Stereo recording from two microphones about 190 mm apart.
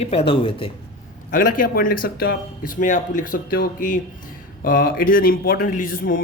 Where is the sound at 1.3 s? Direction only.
45° left (ahead or behind).